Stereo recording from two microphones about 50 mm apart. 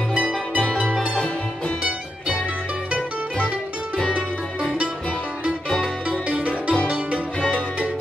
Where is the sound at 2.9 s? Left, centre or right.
Right.